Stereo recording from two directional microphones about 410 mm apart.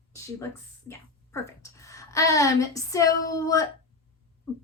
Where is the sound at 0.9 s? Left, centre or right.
Centre.